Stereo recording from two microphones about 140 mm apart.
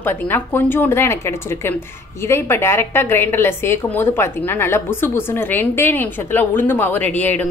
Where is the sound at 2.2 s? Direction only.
20° left (ahead or behind).